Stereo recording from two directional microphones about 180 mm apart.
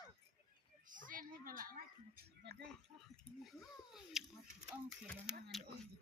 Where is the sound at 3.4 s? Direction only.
Centre (ahead or behind).